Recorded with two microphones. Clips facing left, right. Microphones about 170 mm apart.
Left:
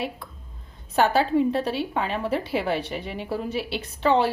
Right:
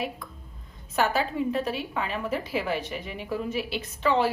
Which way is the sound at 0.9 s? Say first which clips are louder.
Left 5 dB; 30° left (ahead or behind).